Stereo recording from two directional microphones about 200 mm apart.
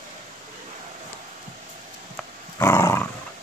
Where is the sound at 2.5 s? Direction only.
15° left (ahead or behind).